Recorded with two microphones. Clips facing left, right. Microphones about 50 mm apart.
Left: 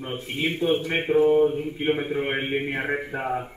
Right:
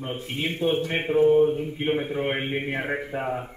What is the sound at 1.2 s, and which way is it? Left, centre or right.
A man's voice, centre.